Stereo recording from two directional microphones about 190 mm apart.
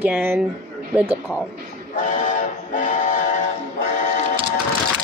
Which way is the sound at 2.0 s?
40° left (ahead or behind).